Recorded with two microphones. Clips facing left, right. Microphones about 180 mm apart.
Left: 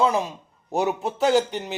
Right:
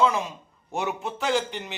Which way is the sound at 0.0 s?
35° left (ahead or behind).